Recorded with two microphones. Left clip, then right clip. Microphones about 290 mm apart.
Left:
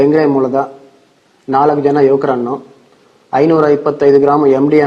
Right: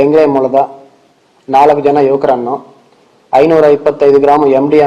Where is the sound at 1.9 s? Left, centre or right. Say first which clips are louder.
Right 2 dB; left.